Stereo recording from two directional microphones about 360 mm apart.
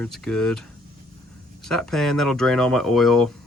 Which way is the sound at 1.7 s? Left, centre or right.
Centre.